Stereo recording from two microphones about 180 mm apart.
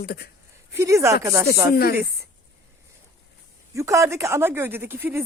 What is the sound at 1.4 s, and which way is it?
Speech, 60° left (ahead or behind).